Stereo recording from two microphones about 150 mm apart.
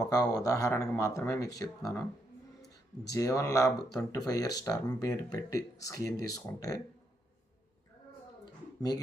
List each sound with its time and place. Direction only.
0.0 s speech: 25° left (ahead or behind)
3.1 s speech: 20° left (ahead or behind)